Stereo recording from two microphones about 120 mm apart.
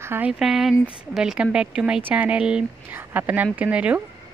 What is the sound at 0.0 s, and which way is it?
Speech, 20° right (ahead or behind).